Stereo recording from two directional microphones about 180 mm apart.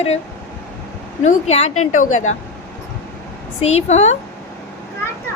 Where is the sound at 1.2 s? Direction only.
40° left (ahead or behind).